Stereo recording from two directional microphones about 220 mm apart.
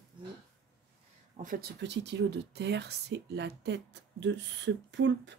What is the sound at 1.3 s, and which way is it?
Speech, 40° right (ahead or behind).